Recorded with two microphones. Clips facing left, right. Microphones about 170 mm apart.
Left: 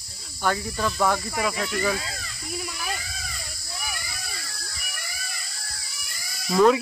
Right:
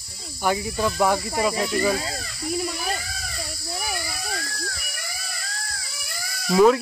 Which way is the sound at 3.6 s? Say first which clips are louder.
Right 5 dB; 50° right (ahead or behind).